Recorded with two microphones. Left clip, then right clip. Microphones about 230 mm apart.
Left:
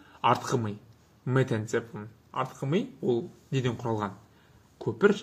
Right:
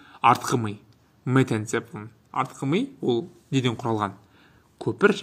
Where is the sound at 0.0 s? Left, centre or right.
Right.